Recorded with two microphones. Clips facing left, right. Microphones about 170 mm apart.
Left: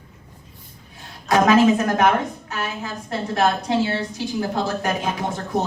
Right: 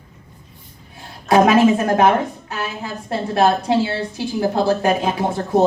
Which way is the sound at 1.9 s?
30° right (ahead or behind).